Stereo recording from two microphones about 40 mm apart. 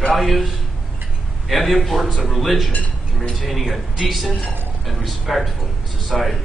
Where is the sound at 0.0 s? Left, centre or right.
Centre.